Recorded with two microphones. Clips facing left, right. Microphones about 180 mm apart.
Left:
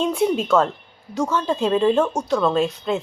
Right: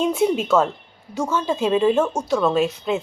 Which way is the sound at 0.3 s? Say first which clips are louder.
Even; 5° right (ahead or behind).